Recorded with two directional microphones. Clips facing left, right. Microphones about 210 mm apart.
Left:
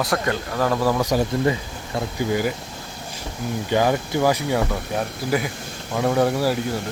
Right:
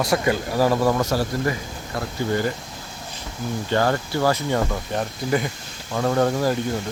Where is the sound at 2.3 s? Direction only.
10° left (ahead or behind).